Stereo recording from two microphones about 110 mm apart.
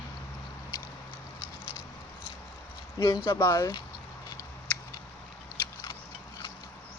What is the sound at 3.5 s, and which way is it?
Speech, 35° left (ahead or behind).